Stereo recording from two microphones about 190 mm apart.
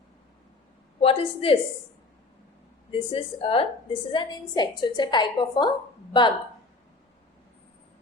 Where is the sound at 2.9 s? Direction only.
30° left (ahead or behind).